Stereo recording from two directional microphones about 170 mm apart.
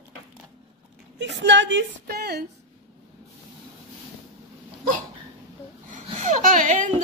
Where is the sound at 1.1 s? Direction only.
90° right; by 2.4 s 65° right (ahead or behind).